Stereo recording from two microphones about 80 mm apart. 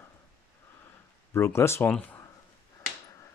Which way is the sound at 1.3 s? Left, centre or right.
Left.